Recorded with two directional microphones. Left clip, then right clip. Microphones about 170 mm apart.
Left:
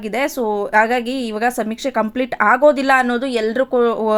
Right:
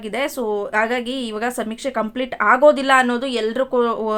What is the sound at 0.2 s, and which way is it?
A woman's voice, 20° left (ahead or behind).